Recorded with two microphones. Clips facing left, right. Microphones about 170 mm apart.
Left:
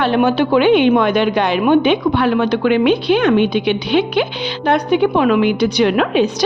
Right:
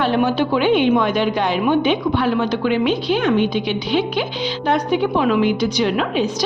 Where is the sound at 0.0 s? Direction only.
70° left (ahead or behind).